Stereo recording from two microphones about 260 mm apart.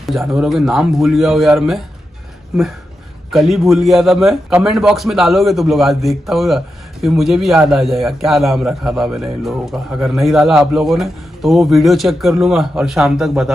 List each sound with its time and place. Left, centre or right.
0.0 s a man's voice: centre
3.3 s a man's voice: centre